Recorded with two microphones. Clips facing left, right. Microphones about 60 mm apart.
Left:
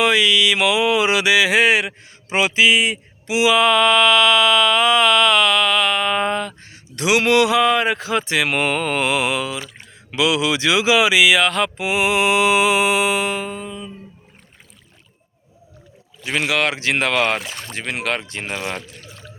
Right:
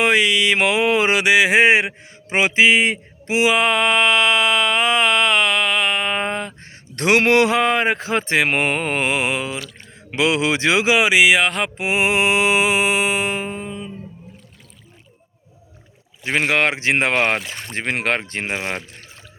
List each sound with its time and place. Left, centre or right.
0.0 s mantra: right
6.6 s a man's voice: right
10.1 s mantra: right
16.2 s a man's voice: right
17.7 s a man's voice: right